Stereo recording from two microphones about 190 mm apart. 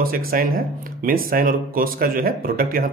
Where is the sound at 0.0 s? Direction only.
50° right (ahead or behind).